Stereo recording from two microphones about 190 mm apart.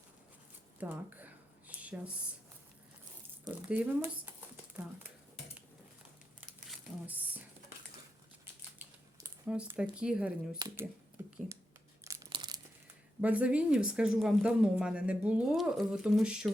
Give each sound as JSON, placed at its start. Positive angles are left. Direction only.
{"t": 0.8, "sound": "a sound", "side_deg": -10}
{"t": 3.4, "sound": "speech", "side_deg": -10}
{"t": 6.7, "sound": "a sound", "side_deg": -10}
{"t": 8.8, "sound": "speech", "side_deg": -10}
{"t": 12.0, "sound": "crumpling", "side_deg": -15}
{"t": 13.2, "sound": "speech", "side_deg": -5}